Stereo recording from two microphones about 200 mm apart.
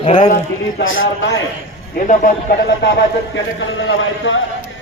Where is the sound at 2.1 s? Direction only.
45° left (ahead or behind).